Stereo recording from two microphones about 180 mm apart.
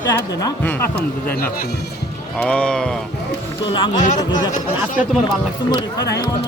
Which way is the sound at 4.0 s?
45° left (ahead or behind).